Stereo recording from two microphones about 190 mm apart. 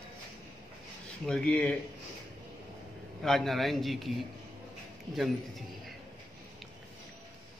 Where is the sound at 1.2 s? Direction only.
5° left (ahead or behind).